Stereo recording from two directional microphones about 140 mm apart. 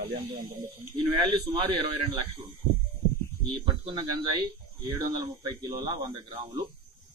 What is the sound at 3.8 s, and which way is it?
Speech, 35° right (ahead or behind).